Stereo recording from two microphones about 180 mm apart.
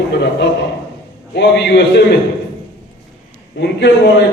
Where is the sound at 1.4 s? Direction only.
70° left (ahead or behind).